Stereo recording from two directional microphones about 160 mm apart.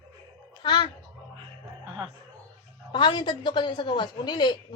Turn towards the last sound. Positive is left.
turn(degrees=25)  # may be behind; listen again after turning